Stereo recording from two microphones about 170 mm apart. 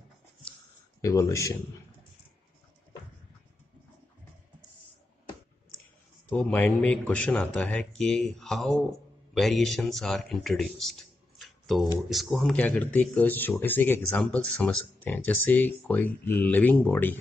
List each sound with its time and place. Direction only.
1.0 s speech: 20° left (ahead or behind)
6.2 s speech: 10° left (ahead or behind)